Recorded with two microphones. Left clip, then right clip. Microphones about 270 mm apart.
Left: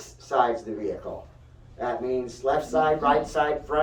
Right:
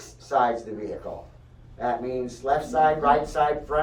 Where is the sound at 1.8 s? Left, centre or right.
Left.